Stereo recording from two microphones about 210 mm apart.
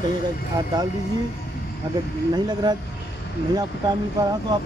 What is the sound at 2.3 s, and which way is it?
Speech, 20° right (ahead or behind).